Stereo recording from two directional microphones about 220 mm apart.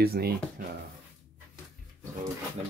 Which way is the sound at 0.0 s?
45° right (ahead or behind).